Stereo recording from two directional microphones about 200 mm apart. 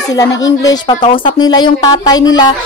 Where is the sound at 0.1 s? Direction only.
20° left (ahead or behind).